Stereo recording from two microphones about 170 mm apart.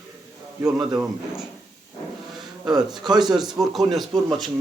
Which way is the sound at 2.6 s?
25° right (ahead or behind).